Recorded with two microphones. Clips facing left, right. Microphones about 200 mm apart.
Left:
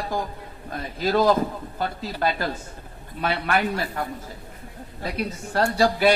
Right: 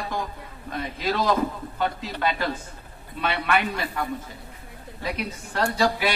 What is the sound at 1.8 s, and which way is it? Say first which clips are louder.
Speech: even; 35° left (ahead or behind).